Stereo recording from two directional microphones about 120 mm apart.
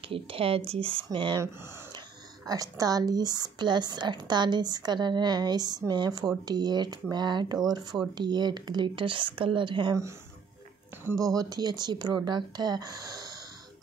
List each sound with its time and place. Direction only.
0.1 s speech: 50° right (ahead or behind)
2.4 s speech: 30° right (ahead or behind)
11.3 s speech: 35° right (ahead or behind)